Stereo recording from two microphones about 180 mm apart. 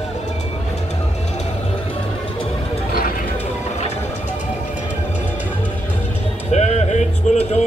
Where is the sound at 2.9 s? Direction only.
55° left (ahead or behind).